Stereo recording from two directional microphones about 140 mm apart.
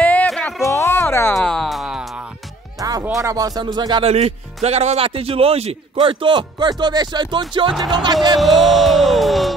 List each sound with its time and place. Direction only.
0.0 s music: 10° left (ahead or behind)
0.7 s a sound: 20° left (ahead or behind)
1.3 s music: 5° left (ahead or behind)
2.8 s music: 25° right (ahead or behind)
3.2 s speech: 25° right (ahead or behind)
4.0 s a man's voice: 50° right (ahead or behind); by 8.4 s 30° right (ahead or behind)
8.4 s music: centre (ahead or behind)